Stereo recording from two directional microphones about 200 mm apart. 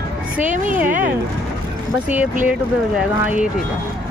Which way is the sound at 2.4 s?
5° right (ahead or behind).